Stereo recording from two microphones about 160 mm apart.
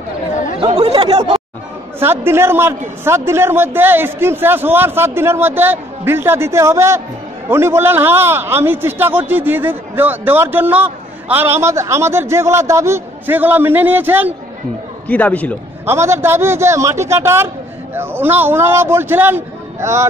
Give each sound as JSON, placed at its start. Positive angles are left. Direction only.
{"t": 0.7, "sound": "speech", "side_deg": -40}
{"t": 2.0, "sound": "a man's voice", "side_deg": -15}
{"t": 15.0, "sound": "a man's voice", "side_deg": 10}
{"t": 15.8, "sound": "a man's voice", "side_deg": -15}